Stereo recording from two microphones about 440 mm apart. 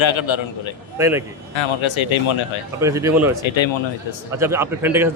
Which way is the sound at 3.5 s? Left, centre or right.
Left.